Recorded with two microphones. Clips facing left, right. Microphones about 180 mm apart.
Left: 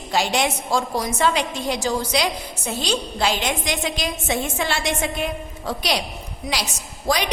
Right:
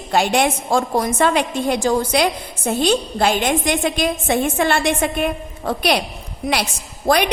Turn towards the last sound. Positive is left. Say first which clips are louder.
# right 6 dB
turn(degrees=-55)  # may be behind; listen again after turning